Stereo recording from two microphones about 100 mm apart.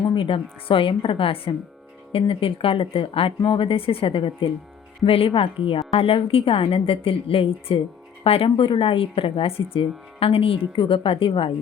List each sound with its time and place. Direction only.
0.1 s a woman's voice: 60° left (ahead or behind)